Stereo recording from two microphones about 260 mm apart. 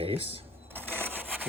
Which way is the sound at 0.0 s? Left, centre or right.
Right.